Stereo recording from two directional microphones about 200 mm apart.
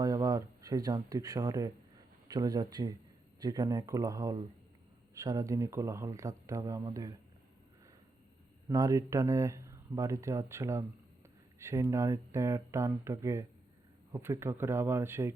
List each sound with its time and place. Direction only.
0.0 s speech: 20° right (ahead or behind)
8.7 s speech: 15° right (ahead or behind)